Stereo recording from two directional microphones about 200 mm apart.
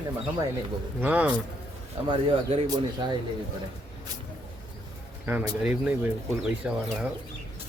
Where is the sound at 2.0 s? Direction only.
25° right (ahead or behind).